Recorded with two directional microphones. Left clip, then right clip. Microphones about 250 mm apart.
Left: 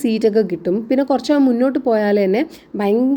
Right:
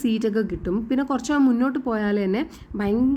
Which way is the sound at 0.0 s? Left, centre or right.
Centre.